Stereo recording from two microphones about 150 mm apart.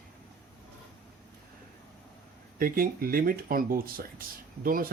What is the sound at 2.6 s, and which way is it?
Speech, 70° right (ahead or behind).